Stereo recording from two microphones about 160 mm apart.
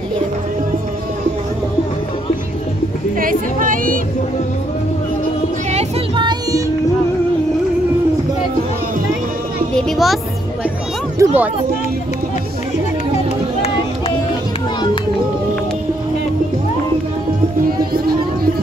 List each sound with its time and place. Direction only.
3.2 s music: 60° right (ahead or behind)
6.1 s music: 30° right (ahead or behind)
9.8 s speech: centre (ahead or behind)
11.1 s a sound: 10° right (ahead or behind)